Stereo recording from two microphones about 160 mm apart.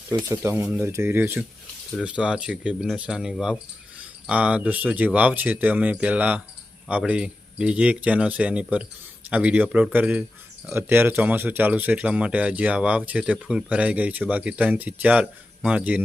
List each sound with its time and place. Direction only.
0.1 s speech: 15° right (ahead or behind)